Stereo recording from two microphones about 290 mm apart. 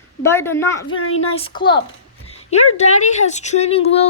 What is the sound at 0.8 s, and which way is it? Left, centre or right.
Speech, left.